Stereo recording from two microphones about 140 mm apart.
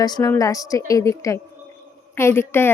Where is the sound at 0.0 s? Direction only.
25° left (ahead or behind).